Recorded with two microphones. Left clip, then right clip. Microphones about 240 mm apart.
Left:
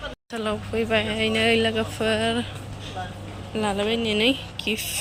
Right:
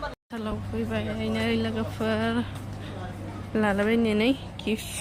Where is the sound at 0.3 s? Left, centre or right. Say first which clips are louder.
Left 7 dB; centre.